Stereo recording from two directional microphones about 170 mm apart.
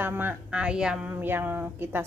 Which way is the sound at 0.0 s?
10° right (ahead or behind).